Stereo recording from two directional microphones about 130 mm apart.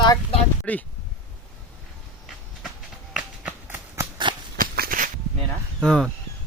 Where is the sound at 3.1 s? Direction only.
10° right (ahead or behind).